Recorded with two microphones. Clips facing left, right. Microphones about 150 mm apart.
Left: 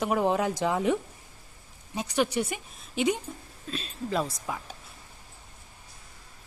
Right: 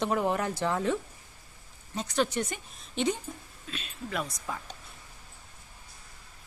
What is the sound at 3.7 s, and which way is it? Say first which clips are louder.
Speech: left 5 dB; 30° left (ahead or behind).